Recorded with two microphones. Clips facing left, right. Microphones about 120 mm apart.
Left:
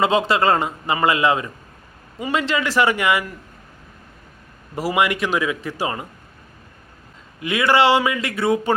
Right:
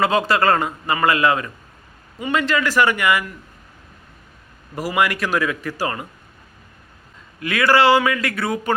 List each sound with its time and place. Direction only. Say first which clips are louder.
0.0 s a man's voice: even; 25° left (ahead or behind)
4.7 s a man's voice: left 1 dB; 25° left (ahead or behind)
7.3 s a man's voice: even; 20° left (ahead or behind)